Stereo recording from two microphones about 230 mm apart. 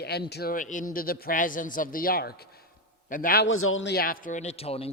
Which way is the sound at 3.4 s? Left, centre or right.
Left.